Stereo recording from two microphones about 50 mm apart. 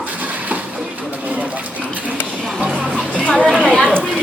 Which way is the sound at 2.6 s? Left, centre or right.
Right.